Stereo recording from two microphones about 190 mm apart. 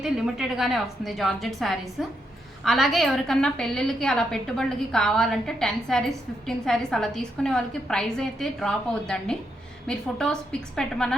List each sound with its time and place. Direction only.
0.0 s a woman's voice: 5° right (ahead or behind)